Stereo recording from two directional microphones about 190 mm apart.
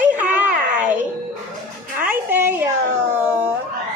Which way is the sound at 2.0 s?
10° right (ahead or behind).